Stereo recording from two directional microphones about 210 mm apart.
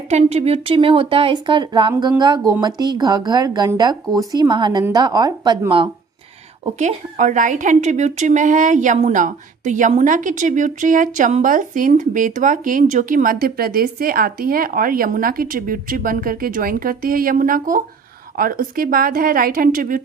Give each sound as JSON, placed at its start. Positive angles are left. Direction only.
{"t": 0.1, "sound": "a woman's voice", "side_deg": -30}
{"t": 6.7, "sound": "a woman's voice", "side_deg": -35}